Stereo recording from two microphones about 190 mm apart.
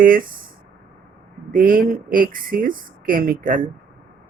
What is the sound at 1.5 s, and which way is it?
Speech, 45° right (ahead or behind).